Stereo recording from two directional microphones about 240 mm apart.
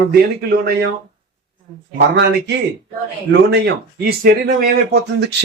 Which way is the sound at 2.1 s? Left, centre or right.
Right.